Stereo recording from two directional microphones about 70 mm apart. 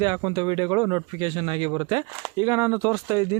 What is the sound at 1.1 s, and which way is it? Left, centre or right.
Speech, right.